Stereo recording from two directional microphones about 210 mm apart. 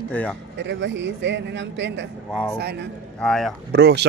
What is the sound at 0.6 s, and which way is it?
Speech, 60° right (ahead or behind).